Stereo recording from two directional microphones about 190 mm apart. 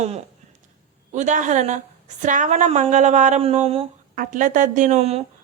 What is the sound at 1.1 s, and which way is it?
Speech, 40° right (ahead or behind).